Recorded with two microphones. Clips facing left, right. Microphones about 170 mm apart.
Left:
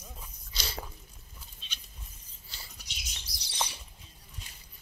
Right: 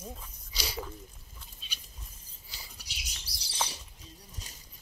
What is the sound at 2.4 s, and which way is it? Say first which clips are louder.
Mouse: even; 10° right (ahead or behind).